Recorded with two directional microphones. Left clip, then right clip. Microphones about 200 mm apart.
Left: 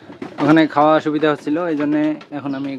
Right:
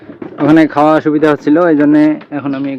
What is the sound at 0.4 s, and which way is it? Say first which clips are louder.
Speech: right 5 dB; 5° right (ahead or behind).